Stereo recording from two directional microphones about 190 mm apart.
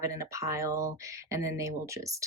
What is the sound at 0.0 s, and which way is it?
Speech, 15° right (ahead or behind).